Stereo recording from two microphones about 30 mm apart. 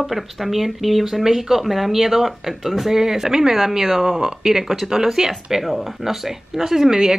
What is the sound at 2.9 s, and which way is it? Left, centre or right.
Speech, centre.